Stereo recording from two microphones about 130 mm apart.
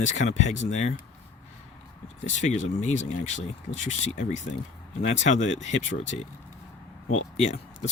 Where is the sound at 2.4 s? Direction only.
65° left (ahead or behind).